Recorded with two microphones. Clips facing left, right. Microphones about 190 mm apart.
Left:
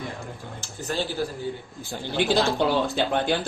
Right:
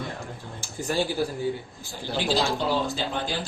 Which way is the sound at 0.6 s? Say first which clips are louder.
Right 2 dB; 10° right (ahead or behind).